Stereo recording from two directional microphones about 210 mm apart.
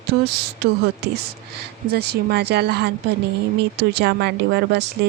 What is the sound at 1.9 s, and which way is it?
Speech, 50° right (ahead or behind).